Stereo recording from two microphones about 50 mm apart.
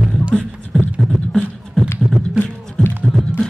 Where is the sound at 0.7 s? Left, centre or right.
Centre.